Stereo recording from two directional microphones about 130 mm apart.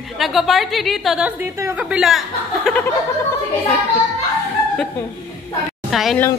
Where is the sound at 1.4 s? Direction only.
20° right (ahead or behind).